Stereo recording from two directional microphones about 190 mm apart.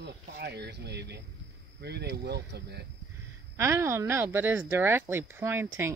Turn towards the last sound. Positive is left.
turn(degrees=-10)  # may be behind; listen again after turning